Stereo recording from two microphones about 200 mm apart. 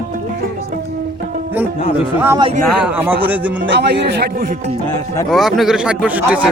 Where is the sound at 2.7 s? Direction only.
10° right (ahead or behind).